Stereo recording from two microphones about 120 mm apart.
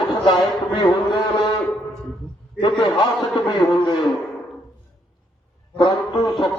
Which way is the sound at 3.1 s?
Centre (ahead or behind).